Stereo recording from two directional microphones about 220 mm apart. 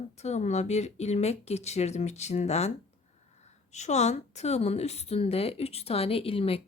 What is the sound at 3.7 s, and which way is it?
Speech, 30° left (ahead or behind).